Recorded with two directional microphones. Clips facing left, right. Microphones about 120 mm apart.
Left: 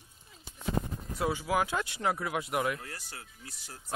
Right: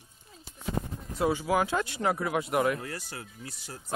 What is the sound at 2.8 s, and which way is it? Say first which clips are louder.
Speech: right 7 dB; 90° right.